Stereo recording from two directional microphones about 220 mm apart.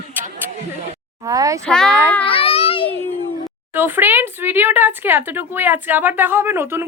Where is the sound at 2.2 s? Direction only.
25° left (ahead or behind).